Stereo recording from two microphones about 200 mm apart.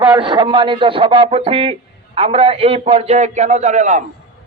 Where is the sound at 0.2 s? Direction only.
25° right (ahead or behind).